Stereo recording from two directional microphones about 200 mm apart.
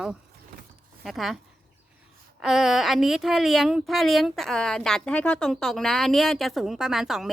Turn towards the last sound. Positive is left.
turn(degrees=0)  # may be behind; listen again after turning